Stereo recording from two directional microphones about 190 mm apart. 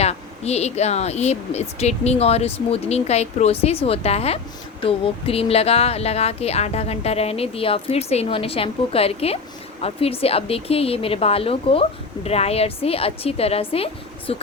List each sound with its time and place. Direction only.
0.0 s speech: 35° left (ahead or behind)